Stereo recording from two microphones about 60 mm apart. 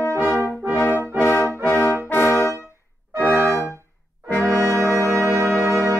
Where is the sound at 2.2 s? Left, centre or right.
Left.